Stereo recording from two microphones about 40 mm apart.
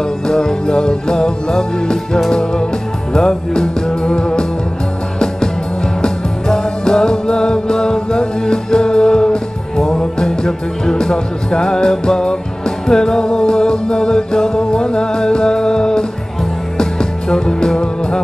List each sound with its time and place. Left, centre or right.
0.3 s music: centre
3.1 s music: centre
6.0 s music: centre